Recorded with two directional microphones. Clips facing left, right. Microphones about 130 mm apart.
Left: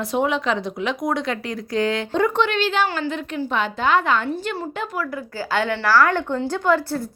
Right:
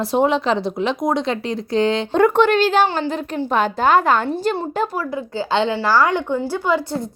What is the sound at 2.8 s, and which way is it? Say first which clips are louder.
A woman's voice: right 3 dB; 30° right (ahead or behind).